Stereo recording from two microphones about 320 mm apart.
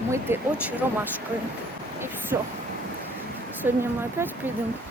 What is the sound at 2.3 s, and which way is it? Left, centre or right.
Speech, centre.